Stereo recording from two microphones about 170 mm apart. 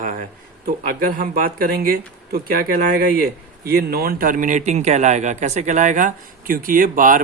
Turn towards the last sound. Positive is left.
turn(degrees=-50)  # may be behind; listen again after turning